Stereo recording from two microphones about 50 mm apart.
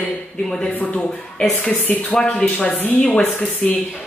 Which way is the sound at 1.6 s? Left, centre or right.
Left.